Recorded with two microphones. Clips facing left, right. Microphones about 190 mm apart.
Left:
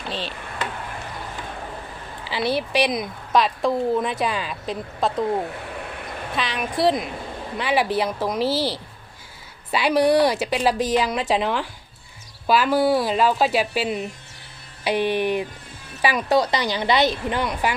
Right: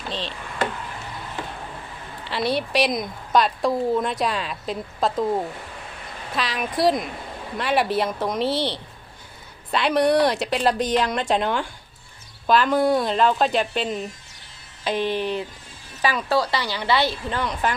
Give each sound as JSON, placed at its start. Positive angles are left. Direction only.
{"t": 0.1, "sound": "a woman's voice", "side_deg": 5}
{"t": 2.2, "sound": "a woman's voice", "side_deg": 0}
{"t": 6.3, "sound": "a woman's voice", "side_deg": 0}